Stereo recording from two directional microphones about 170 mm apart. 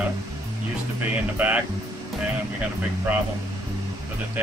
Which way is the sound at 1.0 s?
10° right (ahead or behind).